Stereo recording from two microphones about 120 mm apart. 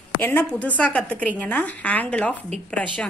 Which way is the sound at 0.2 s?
10° left (ahead or behind).